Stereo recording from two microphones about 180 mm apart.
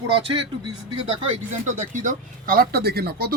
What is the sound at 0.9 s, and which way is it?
Speech, 35° right (ahead or behind).